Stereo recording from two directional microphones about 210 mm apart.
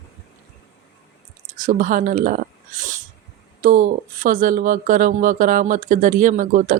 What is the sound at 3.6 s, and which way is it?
Speech, 40° right (ahead or behind).